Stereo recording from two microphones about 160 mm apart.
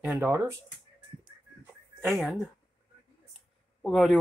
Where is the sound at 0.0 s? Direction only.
15° right (ahead or behind).